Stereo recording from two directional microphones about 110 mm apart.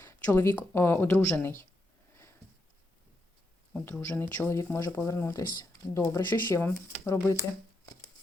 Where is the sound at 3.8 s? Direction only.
20° left (ahead or behind).